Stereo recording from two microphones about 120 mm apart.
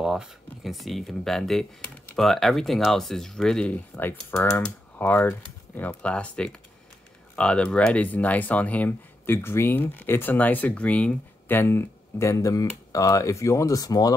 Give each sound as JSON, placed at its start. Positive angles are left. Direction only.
{"t": 0.0, "sound": "speech", "side_deg": -5}